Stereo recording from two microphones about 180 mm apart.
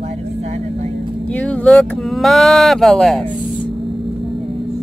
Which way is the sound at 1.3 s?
5° left (ahead or behind).